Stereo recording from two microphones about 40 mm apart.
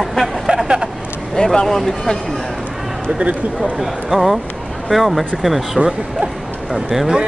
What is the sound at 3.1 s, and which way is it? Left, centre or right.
Speech, right.